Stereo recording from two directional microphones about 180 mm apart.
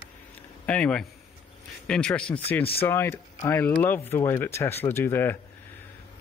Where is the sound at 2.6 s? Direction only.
30° left (ahead or behind).